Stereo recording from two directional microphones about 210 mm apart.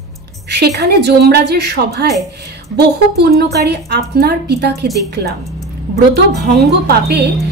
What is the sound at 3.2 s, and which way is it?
A woman's voice, 50° right (ahead or behind).